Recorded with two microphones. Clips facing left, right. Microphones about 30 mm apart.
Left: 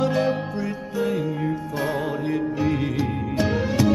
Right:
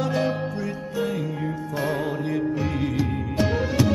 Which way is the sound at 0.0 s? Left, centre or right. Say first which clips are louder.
Left 2 dB; centre.